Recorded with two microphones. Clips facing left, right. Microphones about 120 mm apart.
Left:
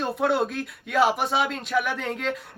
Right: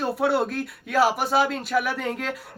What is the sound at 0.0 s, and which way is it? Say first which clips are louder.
Speech: right 1 dB; 5° right (ahead or behind).